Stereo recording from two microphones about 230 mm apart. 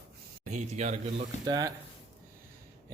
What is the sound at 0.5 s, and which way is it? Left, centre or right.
Speech, right.